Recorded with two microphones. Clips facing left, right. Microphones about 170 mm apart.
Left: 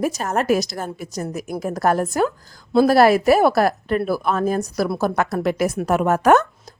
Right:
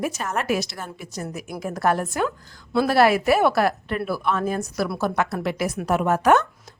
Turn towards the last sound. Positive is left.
turn(degrees=45)  # may be behind; listen again after turning